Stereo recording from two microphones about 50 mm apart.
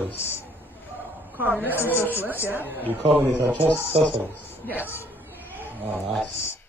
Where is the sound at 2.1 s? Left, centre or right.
Right.